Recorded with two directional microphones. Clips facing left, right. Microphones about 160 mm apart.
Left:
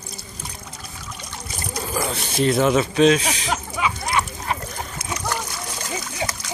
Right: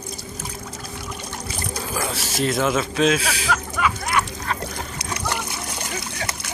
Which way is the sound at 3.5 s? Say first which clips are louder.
Right 2 dB; 25° left (ahead or behind).